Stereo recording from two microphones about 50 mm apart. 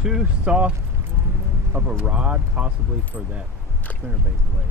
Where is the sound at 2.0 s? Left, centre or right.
Right.